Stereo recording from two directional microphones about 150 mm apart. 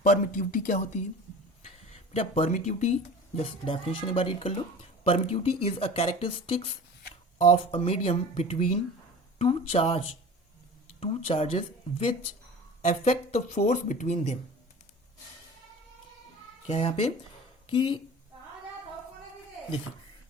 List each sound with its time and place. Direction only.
0.0 s speech: 55° left (ahead or behind)
1.6 s speech: 45° left (ahead or behind)
11.3 s speech: 40° left (ahead or behind)
16.6 s speech: 40° left (ahead or behind)